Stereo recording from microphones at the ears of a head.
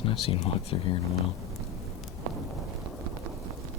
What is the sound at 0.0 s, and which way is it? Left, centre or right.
Speech, left.